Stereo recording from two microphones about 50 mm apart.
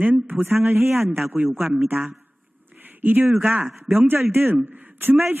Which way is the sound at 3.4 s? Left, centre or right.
Right.